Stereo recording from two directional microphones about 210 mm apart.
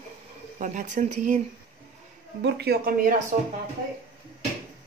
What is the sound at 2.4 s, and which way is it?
Speech, 50° right (ahead or behind).